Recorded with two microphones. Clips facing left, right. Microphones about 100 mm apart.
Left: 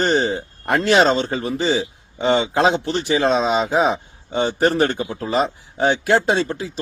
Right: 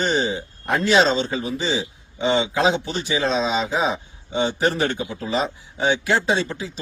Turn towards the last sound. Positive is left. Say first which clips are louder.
# left 3 dB
turn(degrees=50)  # may be behind; listen again after turning